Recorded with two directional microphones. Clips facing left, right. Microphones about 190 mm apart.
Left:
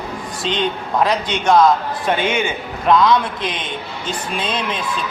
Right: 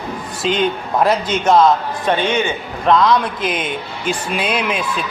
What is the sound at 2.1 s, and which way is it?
A man's voice, 10° left (ahead or behind).